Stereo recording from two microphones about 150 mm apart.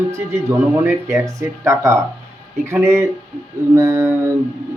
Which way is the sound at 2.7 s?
20° right (ahead or behind).